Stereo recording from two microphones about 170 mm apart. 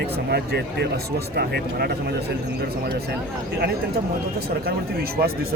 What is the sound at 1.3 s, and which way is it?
Speech, 70° right (ahead or behind).